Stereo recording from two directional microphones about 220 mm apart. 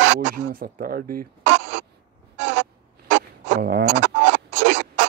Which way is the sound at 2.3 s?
50° right (ahead or behind).